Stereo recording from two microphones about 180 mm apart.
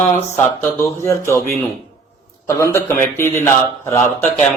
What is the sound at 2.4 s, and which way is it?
Speech, 15° left (ahead or behind).